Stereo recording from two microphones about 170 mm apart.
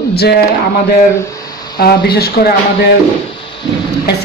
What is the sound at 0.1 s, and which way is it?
Speech, 70° left (ahead or behind).